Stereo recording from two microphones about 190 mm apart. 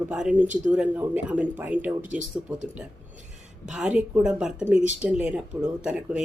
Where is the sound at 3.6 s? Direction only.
5° right (ahead or behind).